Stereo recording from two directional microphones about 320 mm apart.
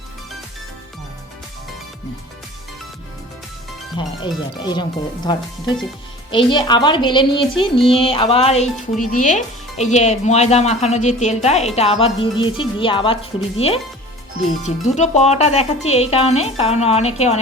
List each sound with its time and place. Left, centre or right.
3.9 s speech: centre
14.6 s speech: left